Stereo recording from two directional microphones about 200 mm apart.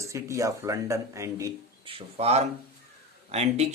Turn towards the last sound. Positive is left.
turn(degrees=-35)  # may be behind; listen again after turning